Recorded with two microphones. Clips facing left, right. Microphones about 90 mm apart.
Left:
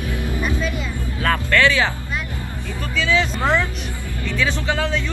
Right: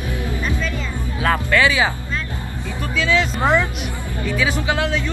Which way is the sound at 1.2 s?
10° right (ahead or behind).